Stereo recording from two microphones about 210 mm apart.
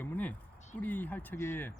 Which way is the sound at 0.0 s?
10° left (ahead or behind).